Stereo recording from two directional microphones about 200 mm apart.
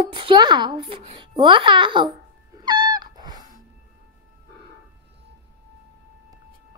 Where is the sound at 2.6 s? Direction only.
20° right (ahead or behind).